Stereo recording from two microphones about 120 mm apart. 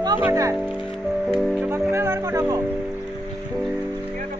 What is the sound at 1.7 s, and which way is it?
Speech, 20° right (ahead or behind).